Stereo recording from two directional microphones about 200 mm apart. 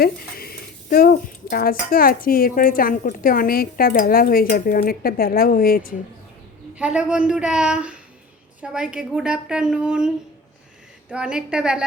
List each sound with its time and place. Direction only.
0.0 s speech: 50° left (ahead or behind)
6.7 s a woman's voice: 5° right (ahead or behind)
11.1 s a woman's voice: 5° right (ahead or behind)